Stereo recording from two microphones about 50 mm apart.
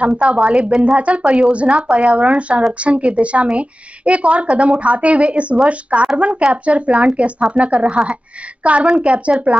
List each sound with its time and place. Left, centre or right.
0.0 s a woman's voice: right